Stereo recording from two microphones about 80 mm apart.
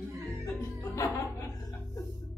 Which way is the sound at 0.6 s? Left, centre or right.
Left.